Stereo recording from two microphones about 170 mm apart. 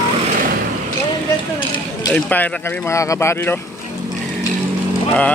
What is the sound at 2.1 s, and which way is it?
Speech, 10° left (ahead or behind).